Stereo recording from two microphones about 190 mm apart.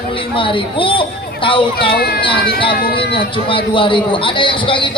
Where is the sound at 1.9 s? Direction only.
55° left (ahead or behind).